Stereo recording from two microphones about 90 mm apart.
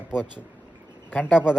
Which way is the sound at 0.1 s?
10° right (ahead or behind).